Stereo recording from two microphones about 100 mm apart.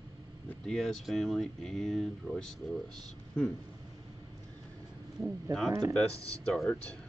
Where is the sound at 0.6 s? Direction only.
5° left (ahead or behind).